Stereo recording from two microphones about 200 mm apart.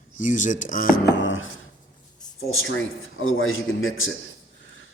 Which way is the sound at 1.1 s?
70° left (ahead or behind).